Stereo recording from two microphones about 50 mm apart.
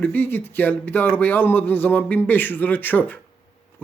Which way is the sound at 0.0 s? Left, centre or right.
Left.